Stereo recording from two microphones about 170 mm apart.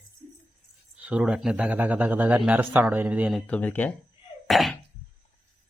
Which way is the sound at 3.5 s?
10° left (ahead or behind).